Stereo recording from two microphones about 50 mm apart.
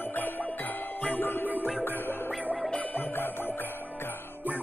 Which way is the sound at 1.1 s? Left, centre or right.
Left.